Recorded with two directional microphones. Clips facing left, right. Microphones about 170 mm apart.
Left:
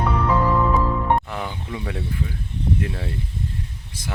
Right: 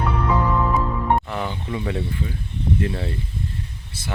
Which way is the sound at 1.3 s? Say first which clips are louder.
Right 3 dB; 5° left (ahead or behind).